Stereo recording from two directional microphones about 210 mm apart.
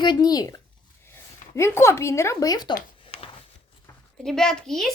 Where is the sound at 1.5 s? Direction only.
10° left (ahead or behind).